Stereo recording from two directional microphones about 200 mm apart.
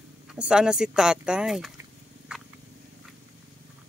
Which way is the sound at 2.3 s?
5° right (ahead or behind).